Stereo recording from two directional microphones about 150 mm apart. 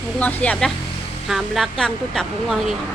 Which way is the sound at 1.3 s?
Centre (ahead or behind).